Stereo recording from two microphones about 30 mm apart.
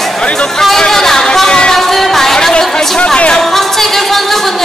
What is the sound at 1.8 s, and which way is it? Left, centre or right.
Music, centre.